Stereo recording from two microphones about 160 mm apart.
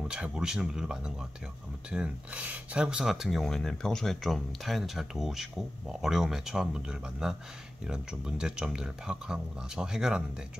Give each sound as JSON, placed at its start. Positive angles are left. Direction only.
{"t": 0.1, "sound": "speech", "side_deg": -5}